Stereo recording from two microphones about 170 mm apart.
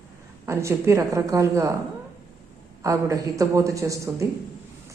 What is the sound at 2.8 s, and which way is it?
A man's voice, 20° right (ahead or behind).